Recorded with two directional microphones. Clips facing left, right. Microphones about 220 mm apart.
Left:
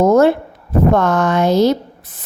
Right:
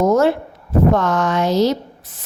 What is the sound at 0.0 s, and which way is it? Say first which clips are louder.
A woman's voice: left 4 dB; 55° left (ahead or behind).